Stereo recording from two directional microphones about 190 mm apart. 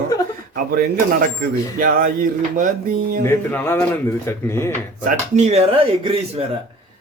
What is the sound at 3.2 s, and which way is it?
Speech, 10° left (ahead or behind).